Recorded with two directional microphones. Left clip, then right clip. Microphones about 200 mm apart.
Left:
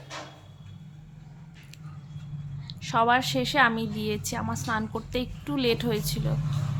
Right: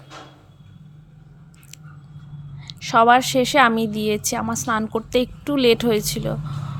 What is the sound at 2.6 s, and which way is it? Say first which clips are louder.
Speech: right 9 dB; 40° right (ahead or behind).